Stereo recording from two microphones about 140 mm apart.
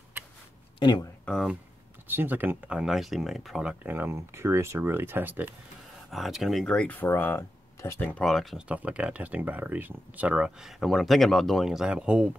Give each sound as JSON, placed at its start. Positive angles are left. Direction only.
{"t": 0.7, "sound": "speech", "side_deg": 30}
{"t": 1.2, "sound": "speech", "side_deg": 5}
{"t": 2.0, "sound": "speech", "side_deg": -15}
{"t": 3.8, "sound": "speech", "side_deg": -15}
{"t": 6.0, "sound": "speech", "side_deg": 0}